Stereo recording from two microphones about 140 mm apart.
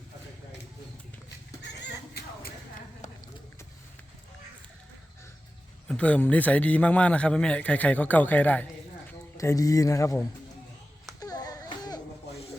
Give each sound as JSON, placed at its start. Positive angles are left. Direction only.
{"t": 5.9, "sound": "a man's voice", "side_deg": 10}
{"t": 9.4, "sound": "speech", "side_deg": 25}
{"t": 11.2, "sound": "baby cry", "side_deg": 25}